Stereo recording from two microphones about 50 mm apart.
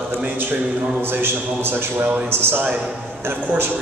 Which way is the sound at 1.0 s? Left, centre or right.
Right.